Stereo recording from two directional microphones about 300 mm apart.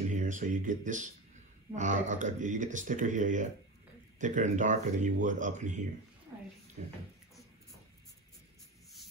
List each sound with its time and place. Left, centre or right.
0.1 s speech: right